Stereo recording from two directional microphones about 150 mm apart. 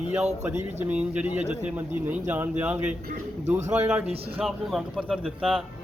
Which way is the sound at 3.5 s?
50° right (ahead or behind).